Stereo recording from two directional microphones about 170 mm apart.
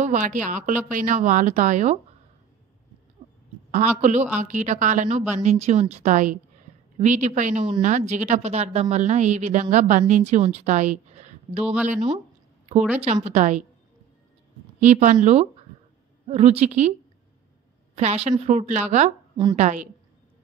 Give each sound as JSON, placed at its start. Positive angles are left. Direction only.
{"t": 0.0, "sound": "a woman's voice", "side_deg": -45}
{"t": 3.7, "sound": "a woman's voice", "side_deg": -45}
{"t": 14.8, "sound": "a woman's voice", "side_deg": -45}
{"t": 17.9, "sound": "a woman's voice", "side_deg": -40}